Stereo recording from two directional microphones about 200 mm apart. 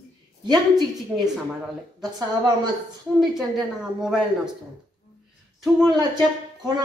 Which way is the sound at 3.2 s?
Centre (ahead or behind).